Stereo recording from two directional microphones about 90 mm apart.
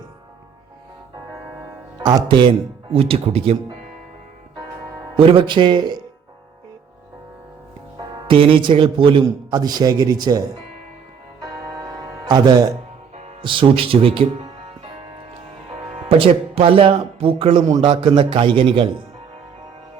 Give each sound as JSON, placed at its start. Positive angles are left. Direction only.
{"t": 2.0, "sound": "speech", "side_deg": -55}
{"t": 5.1, "sound": "speech", "side_deg": -80}
{"t": 8.3, "sound": "a man's voice", "side_deg": -80}
{"t": 9.5, "sound": "a man's voice", "side_deg": -50}
{"t": 12.2, "sound": "speech", "side_deg": -55}
{"t": 13.4, "sound": "speech", "side_deg": -70}
{"t": 16.0, "sound": "speech", "side_deg": -85}